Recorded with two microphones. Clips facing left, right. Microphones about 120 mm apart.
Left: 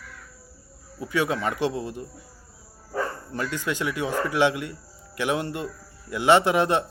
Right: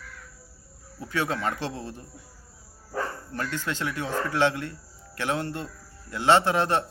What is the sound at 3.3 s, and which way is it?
Speech, 15° left (ahead or behind).